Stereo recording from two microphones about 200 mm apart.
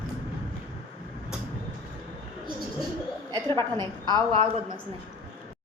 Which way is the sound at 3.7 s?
20° right (ahead or behind).